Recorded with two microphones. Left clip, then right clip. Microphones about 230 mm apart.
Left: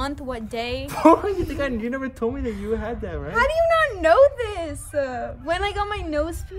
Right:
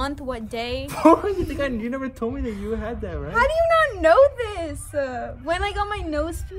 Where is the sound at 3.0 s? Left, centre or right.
Centre.